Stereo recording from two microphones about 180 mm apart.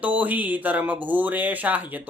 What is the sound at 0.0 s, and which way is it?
Speech, 10° right (ahead or behind).